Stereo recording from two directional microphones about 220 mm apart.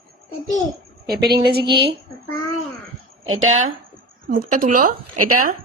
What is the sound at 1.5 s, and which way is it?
Speech, 50° right (ahead or behind).